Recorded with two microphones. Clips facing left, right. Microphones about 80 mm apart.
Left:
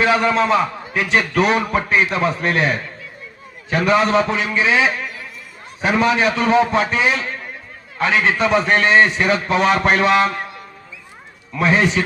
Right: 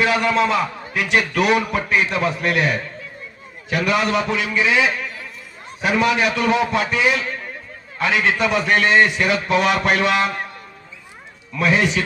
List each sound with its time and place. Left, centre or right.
0.0 s a man's voice: left
11.5 s a man's voice: left